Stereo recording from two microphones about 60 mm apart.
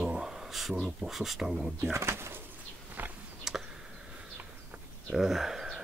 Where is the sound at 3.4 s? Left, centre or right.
Centre.